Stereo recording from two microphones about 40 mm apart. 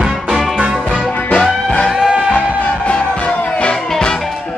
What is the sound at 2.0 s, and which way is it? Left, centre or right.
Music, centre.